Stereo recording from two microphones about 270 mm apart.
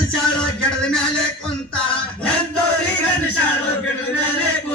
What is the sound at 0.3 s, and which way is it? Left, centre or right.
Music, centre.